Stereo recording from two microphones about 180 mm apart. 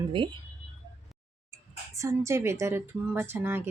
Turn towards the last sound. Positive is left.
turn(degrees=-10)  # may be behind; listen again after turning